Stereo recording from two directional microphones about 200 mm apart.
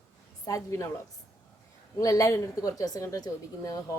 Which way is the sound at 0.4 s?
15° left (ahead or behind).